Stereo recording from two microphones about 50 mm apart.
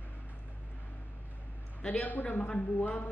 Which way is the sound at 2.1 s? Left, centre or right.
Left.